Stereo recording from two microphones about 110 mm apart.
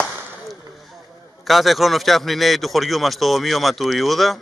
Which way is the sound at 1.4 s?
Centre (ahead or behind).